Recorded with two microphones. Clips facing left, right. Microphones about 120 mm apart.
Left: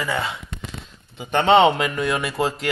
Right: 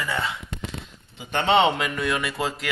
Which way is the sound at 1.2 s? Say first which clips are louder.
Left 5 dB; 45° left (ahead or behind).